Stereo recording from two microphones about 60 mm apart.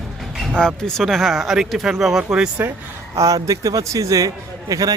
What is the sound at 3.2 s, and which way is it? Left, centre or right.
Speech, right.